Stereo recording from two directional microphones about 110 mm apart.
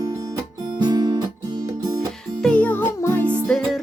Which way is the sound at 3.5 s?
Centre (ahead or behind).